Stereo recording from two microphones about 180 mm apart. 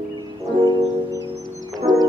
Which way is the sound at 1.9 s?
25° right (ahead or behind).